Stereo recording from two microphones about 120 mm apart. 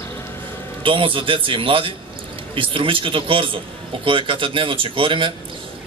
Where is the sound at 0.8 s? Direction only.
45° right (ahead or behind).